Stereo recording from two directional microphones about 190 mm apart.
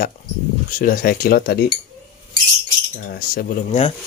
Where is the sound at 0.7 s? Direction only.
45° left (ahead or behind).